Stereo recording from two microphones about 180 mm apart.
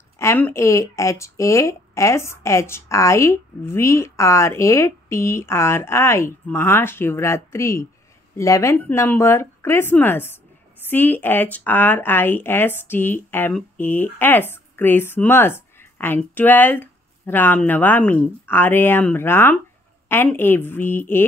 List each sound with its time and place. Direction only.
0.2 s speech: 15° left (ahead or behind)